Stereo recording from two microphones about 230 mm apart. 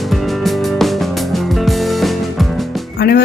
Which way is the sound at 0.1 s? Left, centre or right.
Centre.